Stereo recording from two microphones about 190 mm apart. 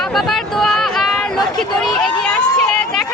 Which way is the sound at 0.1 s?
Centre (ahead or behind).